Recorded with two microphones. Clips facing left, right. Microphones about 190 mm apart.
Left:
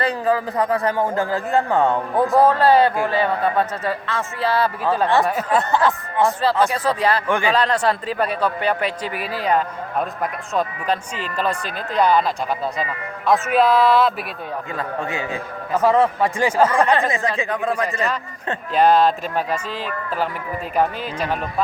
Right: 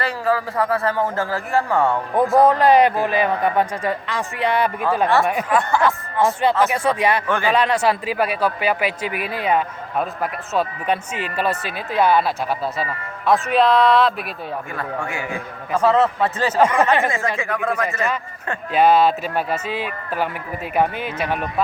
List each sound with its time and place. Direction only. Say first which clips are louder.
0.0 s a man's voice: left 1 dB; 20° left (ahead or behind)
2.4 s a man's voice: right 1 dB; 15° right (ahead or behind)
5.5 s a man's voice: even; 25° left (ahead or behind)
6.7 s a man's voice: right 1 dB; 10° right (ahead or behind)
7.3 s a man's voice: left 1 dB; 15° left (ahead or behind)
7.5 s a man's voice: right 1 dB; 10° right (ahead or behind)
9.1 s speech: right 1 dB; 35° left (ahead or behind)
9.5 s a man's voice: left 1 dB; 5° right (ahead or behind)
11.3 s a man's voice: even; 5° right (ahead or behind)
13.2 s speech: even; centre (ahead or behind)
14.8 s a man's voice: left 3 dB; 20° left (ahead or behind)
16.6 s a man's voice: right 1 dB; 10° right (ahead or behind)
17.1 s a man's voice: left 1 dB; 20° left (ahead or behind)
18.7 s a man's voice: even; 5° right (ahead or behind)